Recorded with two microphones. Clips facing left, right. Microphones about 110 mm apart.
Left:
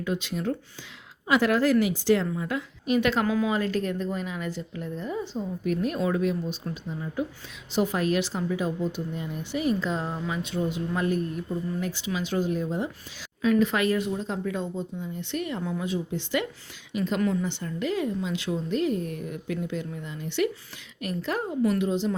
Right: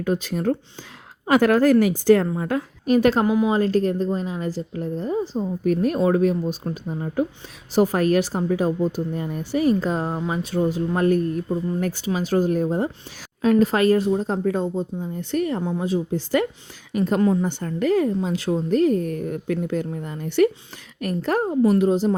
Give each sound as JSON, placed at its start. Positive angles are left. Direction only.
{"t": 0.0, "sound": "a woman's voice", "side_deg": -45}
{"t": 3.2, "sound": "a woman's voice", "side_deg": -20}
{"t": 3.5, "sound": "a woman's voice", "side_deg": -35}
{"t": 15.6, "sound": "a woman's voice", "side_deg": -30}
{"t": 17.2, "sound": "a woman's voice", "side_deg": -30}
{"t": 17.4, "sound": "a woman's voice", "side_deg": -50}